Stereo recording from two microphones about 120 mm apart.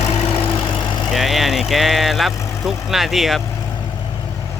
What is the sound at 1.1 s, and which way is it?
Speech, centre (ahead or behind).